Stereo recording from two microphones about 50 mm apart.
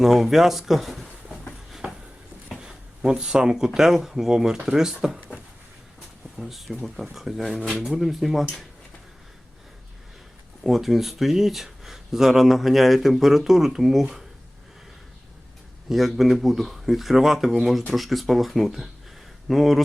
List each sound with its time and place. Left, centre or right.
0.0 s speech: centre
1.8 s a sound: right
2.6 s a sound: centre
3.8 s speech: centre
6.3 s speech: centre
10.6 s speech: centre
15.9 s speech: centre